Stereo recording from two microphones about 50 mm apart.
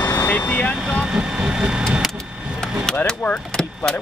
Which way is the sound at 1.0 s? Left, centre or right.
Centre.